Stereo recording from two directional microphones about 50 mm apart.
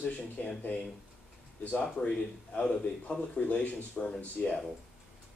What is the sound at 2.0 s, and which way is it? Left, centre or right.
A man's voice, left.